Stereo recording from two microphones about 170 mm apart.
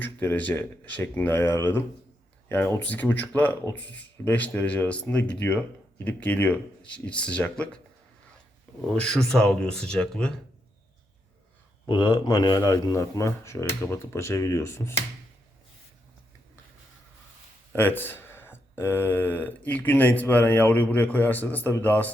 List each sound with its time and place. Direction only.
0.0 s speech: 10° left (ahead or behind)
8.9 s speech: 5° left (ahead or behind)
11.9 s speech: 25° left (ahead or behind)
17.7 s speech: 10° left (ahead or behind)